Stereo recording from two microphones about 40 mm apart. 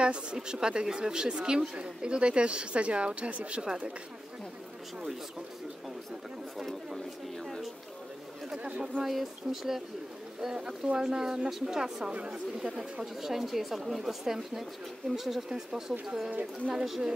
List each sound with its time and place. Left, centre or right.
0.0 s speech: right
8.6 s speech: right
9.0 s speech: centre
12.1 s speech: right
12.5 s speech: centre
15.5 s speech: centre
16.3 s speech: right
16.7 s speech: centre